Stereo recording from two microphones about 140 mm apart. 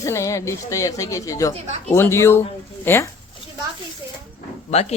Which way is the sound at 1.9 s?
20° left (ahead or behind).